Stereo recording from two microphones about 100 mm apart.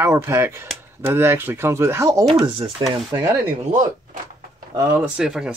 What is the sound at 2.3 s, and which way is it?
Speech, 45° right (ahead or behind).